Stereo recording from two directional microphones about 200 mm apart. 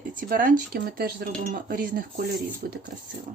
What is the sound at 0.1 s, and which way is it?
Speech, 45° right (ahead or behind).